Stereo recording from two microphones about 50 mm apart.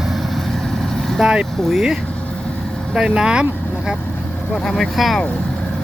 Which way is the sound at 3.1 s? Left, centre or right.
Centre.